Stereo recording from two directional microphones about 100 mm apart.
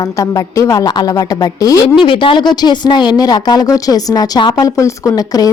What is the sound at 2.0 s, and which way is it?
Speech, 60° left (ahead or behind).